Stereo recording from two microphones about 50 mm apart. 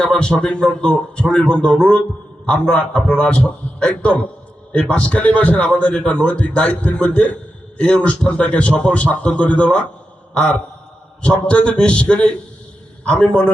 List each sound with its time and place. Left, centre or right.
0.0 s a man's voice: centre